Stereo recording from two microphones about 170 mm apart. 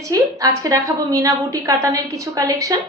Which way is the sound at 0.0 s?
20° right (ahead or behind).